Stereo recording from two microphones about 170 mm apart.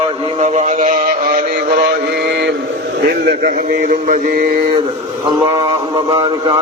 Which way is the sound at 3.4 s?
50° right (ahead or behind).